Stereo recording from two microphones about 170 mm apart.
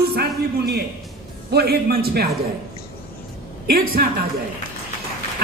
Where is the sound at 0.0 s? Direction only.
70° right (ahead or behind).